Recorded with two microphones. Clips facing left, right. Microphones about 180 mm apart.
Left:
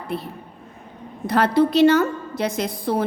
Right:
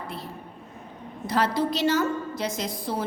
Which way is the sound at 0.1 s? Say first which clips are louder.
Left 9 dB; 60° left (ahead or behind).